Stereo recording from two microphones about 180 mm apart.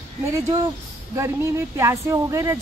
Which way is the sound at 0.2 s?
15° right (ahead or behind).